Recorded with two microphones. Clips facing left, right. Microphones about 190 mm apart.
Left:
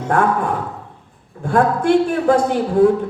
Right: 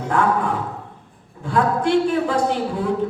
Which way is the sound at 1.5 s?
50° left (ahead or behind).